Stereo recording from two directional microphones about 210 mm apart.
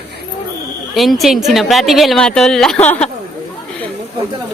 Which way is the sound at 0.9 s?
Centre (ahead or behind).